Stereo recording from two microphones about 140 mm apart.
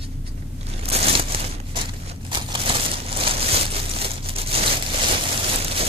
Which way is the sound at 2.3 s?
35° right (ahead or behind).